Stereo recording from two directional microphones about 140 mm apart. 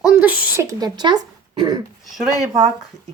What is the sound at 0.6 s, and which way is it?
Speech, 30° right (ahead or behind).